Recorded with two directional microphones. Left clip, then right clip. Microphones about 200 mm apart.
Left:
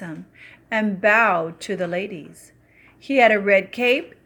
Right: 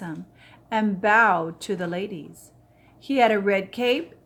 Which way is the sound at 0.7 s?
5° left (ahead or behind).